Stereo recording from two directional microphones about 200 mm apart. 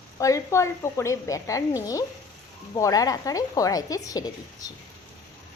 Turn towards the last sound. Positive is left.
turn(degrees=20)  # may be behind; listen again after turning